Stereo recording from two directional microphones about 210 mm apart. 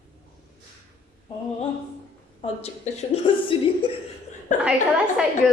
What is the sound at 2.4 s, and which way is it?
A woman's voice, 30° left (ahead or behind).